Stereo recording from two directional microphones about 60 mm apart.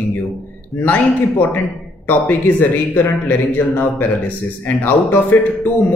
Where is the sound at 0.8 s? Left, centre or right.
Left.